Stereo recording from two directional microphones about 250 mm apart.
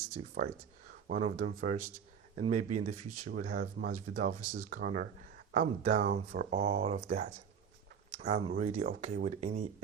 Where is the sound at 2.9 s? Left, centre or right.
Right.